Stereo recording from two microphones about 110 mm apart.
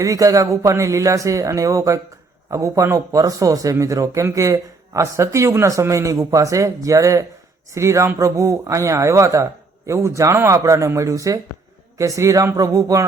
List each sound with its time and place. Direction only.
0.0 s speech: 30° right (ahead or behind)